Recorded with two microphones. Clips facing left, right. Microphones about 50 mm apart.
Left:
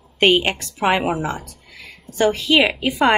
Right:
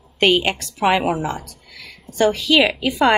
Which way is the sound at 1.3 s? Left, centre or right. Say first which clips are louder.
Even; left.